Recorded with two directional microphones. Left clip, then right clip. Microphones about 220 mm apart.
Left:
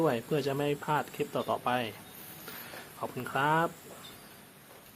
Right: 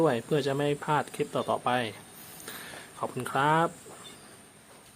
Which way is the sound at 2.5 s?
15° right (ahead or behind).